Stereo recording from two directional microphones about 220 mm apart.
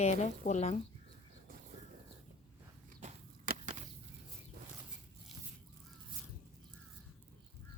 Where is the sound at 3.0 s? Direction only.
35° right (ahead or behind).